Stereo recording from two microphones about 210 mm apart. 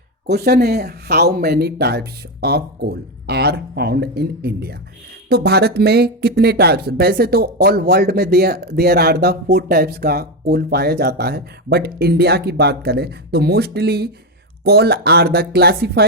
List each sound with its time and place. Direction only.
0.3 s speech: 50° right (ahead or behind)